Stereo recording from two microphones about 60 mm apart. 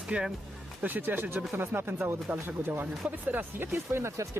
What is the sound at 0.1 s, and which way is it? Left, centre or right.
Speech, centre.